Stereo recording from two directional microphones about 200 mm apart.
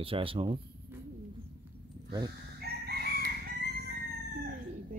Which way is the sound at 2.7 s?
55° right (ahead or behind).